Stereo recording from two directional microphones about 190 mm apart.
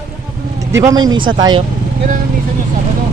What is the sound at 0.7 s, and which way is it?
Speech, 15° right (ahead or behind).